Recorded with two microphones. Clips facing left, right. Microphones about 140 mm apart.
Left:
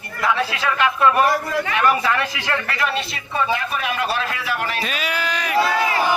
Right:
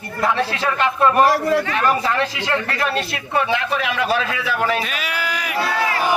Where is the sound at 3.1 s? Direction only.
70° right (ahead or behind); by 4.0 s 90° right.